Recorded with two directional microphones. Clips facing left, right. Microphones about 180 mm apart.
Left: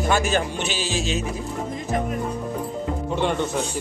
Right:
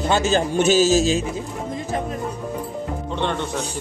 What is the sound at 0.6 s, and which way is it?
Music, 45° right (ahead or behind).